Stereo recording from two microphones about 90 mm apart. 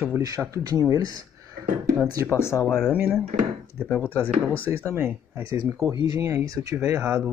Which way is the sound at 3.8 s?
20° left (ahead or behind).